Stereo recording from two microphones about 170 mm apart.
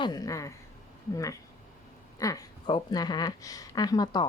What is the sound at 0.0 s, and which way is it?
A woman's voice, 20° left (ahead or behind).